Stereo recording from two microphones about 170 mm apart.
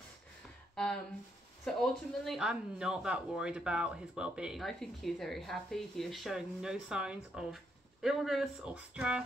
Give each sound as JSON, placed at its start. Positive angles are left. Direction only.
{"t": 0.7, "sound": "speech", "side_deg": 5}